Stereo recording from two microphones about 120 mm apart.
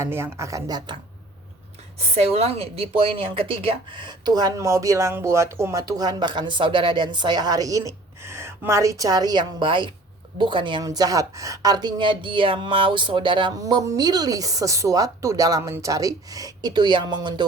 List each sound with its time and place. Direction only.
0.0 s speech: 20° right (ahead or behind)
2.1 s a woman's voice: 60° right (ahead or behind); by 13.5 s 45° right (ahead or behind)
13.6 s a woman's voice: 30° right (ahead or behind)